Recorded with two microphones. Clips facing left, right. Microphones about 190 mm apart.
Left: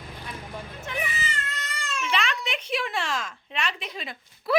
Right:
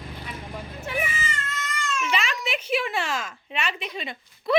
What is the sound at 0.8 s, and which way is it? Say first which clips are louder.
Cat: right 4 dB; 5° right (ahead or behind).